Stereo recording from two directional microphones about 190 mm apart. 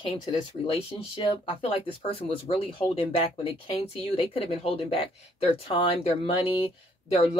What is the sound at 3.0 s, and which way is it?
Speech, 30° left (ahead or behind).